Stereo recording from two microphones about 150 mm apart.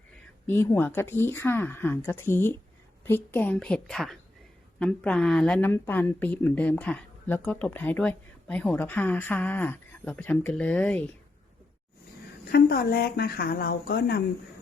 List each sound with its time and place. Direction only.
0.4 s speech: 15° left (ahead or behind)
12.5 s speech: 90° left